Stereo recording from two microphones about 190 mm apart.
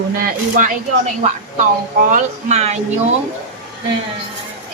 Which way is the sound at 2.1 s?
35° right (ahead or behind).